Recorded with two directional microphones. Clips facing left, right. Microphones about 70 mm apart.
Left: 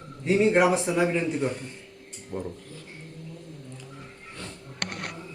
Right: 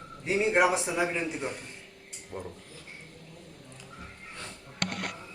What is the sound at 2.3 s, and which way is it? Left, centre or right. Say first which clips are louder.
Speech: left 6 dB; centre.